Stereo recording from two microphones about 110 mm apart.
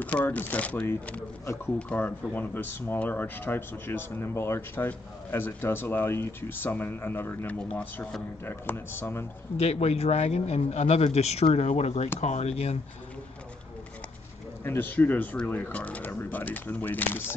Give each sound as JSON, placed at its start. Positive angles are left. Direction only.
{"t": 0.0, "sound": "speech", "side_deg": 15}
{"t": 9.6, "sound": "a man's voice", "side_deg": 70}
{"t": 12.2, "sound": "speech", "side_deg": 85}
{"t": 14.6, "sound": "speech", "side_deg": 20}